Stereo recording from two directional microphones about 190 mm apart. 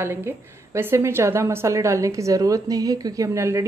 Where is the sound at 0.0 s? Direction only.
15° right (ahead or behind).